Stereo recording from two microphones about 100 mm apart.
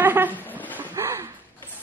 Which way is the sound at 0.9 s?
30° right (ahead or behind).